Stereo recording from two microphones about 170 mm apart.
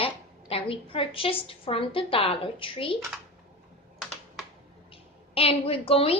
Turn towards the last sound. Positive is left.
turn(degrees=35)  # may be behind; listen again after turning